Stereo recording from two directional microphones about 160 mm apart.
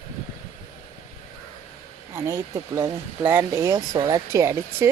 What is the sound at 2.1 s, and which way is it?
Speech, 20° right (ahead or behind).